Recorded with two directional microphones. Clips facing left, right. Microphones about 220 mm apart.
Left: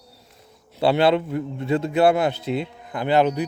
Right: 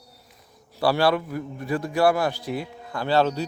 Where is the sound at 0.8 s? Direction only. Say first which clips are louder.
Left 3 dB; 20° left (ahead or behind).